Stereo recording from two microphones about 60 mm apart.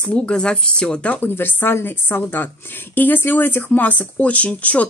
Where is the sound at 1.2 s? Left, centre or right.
Left.